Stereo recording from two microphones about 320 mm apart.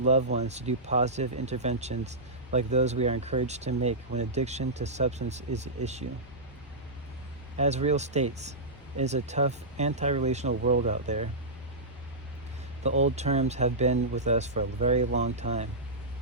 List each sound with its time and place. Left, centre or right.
0.0 s speech: right
7.6 s speech: right
10.5 s speech: right
13.1 s speech: right